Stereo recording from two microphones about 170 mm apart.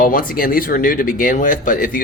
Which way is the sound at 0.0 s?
55° left (ahead or behind).